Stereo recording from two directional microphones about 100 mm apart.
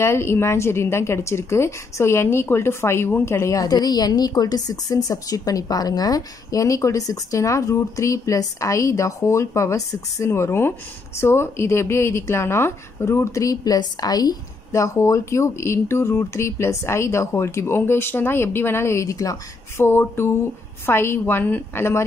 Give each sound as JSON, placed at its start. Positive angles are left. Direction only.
{"t": 0.0, "sound": "a woman's voice", "side_deg": 25}